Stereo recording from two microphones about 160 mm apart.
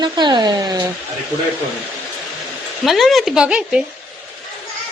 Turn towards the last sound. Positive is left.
turn(degrees=-5)  # may be behind; listen again after turning